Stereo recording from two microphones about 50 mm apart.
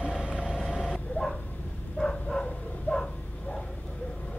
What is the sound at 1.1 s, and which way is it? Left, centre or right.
Dog, centre.